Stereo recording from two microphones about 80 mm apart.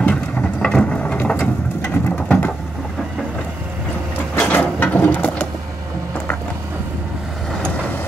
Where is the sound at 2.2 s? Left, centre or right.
Centre.